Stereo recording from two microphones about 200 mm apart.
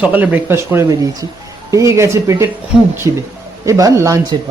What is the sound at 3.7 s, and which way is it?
Speech, 15° right (ahead or behind).